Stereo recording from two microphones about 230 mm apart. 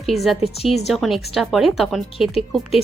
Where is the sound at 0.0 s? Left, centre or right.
Centre.